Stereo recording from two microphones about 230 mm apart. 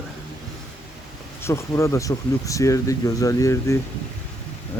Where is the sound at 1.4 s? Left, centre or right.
Centre.